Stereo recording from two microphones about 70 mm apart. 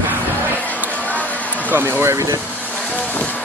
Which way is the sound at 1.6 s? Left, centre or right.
Right.